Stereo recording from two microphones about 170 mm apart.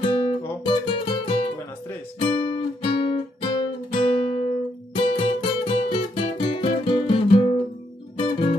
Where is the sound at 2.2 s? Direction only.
30° left (ahead or behind).